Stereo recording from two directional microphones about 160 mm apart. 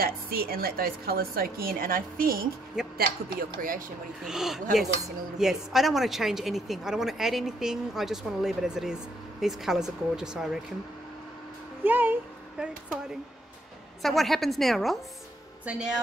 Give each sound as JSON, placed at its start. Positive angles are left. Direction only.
{"t": 0.0, "sound": "a woman's voice", "side_deg": -70}
{"t": 4.2, "sound": "speech", "side_deg": -5}
{"t": 11.8, "sound": "speech", "side_deg": -10}
{"t": 14.0, "sound": "speech", "side_deg": 0}